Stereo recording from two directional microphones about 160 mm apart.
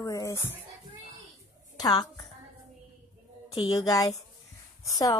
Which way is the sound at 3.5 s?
25° left (ahead or behind).